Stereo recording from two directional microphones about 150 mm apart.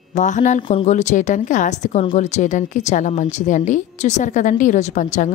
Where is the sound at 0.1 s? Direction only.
55° left (ahead or behind).